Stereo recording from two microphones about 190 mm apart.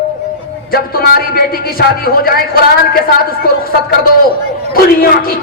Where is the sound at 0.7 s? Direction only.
50° left (ahead or behind).